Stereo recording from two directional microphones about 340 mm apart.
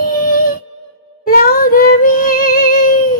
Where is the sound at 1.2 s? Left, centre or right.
Left.